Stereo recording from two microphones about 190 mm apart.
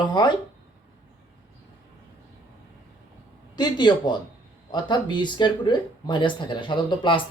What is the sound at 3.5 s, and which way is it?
Speech, 25° left (ahead or behind).